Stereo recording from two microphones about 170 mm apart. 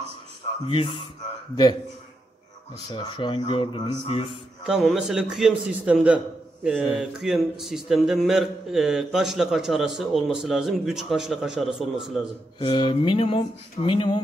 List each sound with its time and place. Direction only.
0.7 s speech: 30° left (ahead or behind)
2.9 s a man's voice: 25° left (ahead or behind)
4.6 s a man's voice: centre (ahead or behind)
12.5 s speech: 30° left (ahead or behind)